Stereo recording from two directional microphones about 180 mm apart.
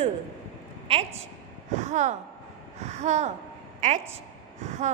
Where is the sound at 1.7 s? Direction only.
40° right (ahead or behind).